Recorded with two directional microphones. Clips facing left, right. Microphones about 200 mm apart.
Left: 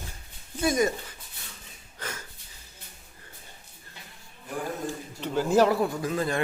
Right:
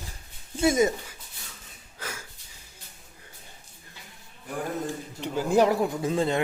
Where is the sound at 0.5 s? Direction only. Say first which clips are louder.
Right 3 dB; 25° right (ahead or behind).